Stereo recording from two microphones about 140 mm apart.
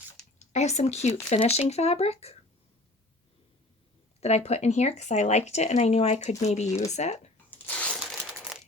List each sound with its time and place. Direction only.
0.3 s speech: 55° left (ahead or behind)
4.2 s speech: 50° left (ahead or behind)
7.5 s a sound: 10° left (ahead or behind)
7.9 s crumpling: centre (ahead or behind)